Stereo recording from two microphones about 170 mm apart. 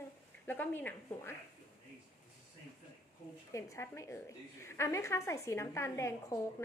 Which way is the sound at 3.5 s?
15° left (ahead or behind).